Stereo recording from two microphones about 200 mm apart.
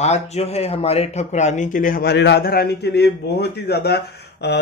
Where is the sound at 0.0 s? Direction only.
35° left (ahead or behind).